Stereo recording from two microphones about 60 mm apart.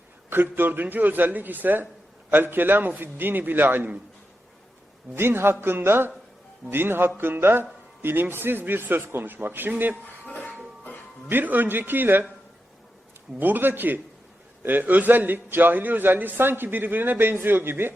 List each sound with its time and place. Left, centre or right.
0.3 s a man's voice: right
5.1 s a man's voice: right
11.3 s a man's voice: right
13.4 s a man's voice: right